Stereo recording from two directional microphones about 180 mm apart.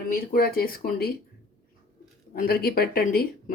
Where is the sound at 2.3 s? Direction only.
55° left (ahead or behind).